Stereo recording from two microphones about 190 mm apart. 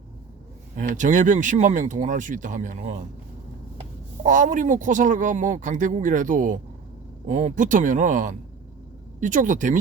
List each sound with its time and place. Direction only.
0.8 s speech: 40° right (ahead or behind)
4.2 s speech: 40° right (ahead or behind)